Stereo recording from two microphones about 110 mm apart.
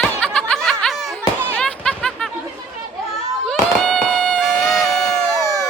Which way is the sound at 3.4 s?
5° left (ahead or behind).